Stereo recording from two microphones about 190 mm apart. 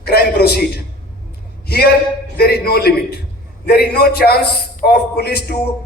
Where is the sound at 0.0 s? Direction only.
55° left (ahead or behind).